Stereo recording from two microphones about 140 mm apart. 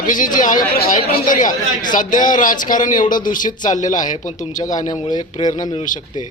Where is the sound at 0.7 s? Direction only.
90° left.